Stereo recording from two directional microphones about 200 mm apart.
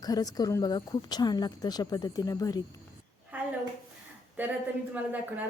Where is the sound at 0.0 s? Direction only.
20° left (ahead or behind).